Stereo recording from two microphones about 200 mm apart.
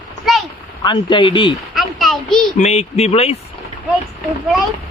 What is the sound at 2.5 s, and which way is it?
Speech, 35° left (ahead or behind).